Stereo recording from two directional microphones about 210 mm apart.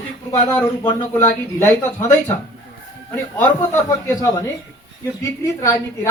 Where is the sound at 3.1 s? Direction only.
10° left (ahead or behind).